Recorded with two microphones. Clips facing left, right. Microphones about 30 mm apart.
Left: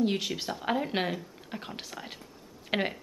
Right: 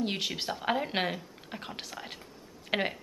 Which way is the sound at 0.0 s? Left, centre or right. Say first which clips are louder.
Left 3 dB; centre.